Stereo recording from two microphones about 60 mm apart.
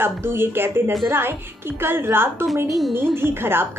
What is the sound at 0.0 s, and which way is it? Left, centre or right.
A woman's voice, right.